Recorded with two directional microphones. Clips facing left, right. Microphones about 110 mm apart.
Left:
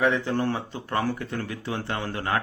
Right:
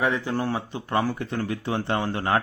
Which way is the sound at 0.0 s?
10° right (ahead or behind).